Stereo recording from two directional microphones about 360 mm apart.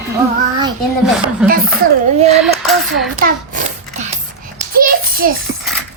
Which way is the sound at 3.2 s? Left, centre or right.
Right.